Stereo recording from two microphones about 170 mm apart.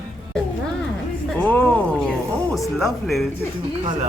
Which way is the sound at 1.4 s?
10° left (ahead or behind).